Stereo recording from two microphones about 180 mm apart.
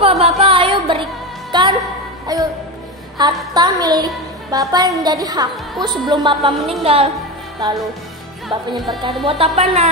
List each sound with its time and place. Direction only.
0.0 s a sound: 35° right (ahead or behind)
1.5 s music: 25° right (ahead or behind)
3.5 s a woman's voice: 20° right (ahead or behind)
7.6 s music: 25° right (ahead or behind)
8.5 s music: centre (ahead or behind)
9.0 s speech: 30° right (ahead or behind)